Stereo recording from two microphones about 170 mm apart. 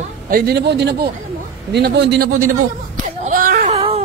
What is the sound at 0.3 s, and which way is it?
A man's voice, 70° right (ahead or behind).